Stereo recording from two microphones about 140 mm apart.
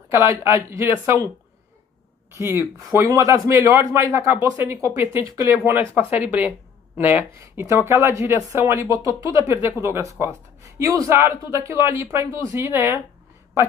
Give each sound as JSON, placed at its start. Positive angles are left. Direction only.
{"t": 0.1, "sound": "speech", "side_deg": -20}
{"t": 2.3, "sound": "speech", "side_deg": -20}
{"t": 6.1, "sound": "speech", "side_deg": -10}